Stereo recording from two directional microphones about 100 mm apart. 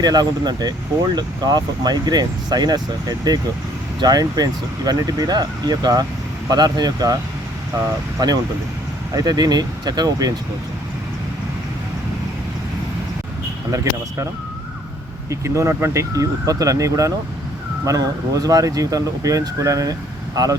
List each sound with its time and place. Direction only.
0.0 s speech: 45° right (ahead or behind)
8.2 s speech: 40° right (ahead or behind)
13.7 s speech: 35° right (ahead or behind)
15.3 s speech: 30° right (ahead or behind)